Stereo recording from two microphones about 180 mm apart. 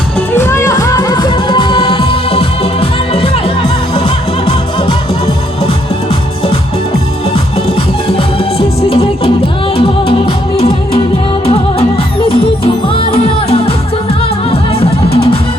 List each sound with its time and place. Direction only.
0.3 s music: 15° left (ahead or behind); by 5.7 s 30° left (ahead or behind)
8.0 s music: 30° left (ahead or behind)
12.9 s music: 30° left (ahead or behind)